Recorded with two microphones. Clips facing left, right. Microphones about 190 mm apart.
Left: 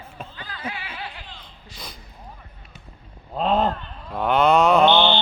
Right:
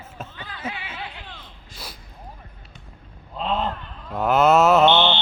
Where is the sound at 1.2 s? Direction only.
55° right (ahead or behind).